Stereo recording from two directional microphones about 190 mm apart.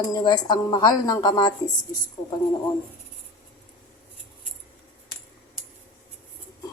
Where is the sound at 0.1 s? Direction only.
20° left (ahead or behind).